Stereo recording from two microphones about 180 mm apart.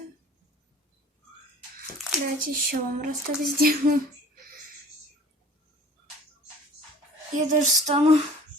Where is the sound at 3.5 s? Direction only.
55° right (ahead or behind).